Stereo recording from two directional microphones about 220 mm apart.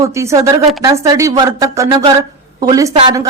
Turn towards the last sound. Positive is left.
turn(degrees=-15)  # may be behind; listen again after turning